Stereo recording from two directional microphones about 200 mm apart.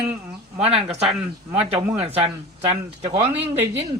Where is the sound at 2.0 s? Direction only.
30° right (ahead or behind).